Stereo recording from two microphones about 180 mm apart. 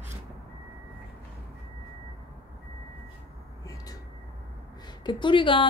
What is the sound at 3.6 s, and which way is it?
Vehicle, 20° left (ahead or behind).